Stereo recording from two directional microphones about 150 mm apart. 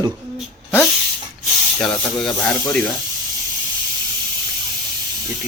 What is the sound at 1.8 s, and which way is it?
Speech, 5° left (ahead or behind).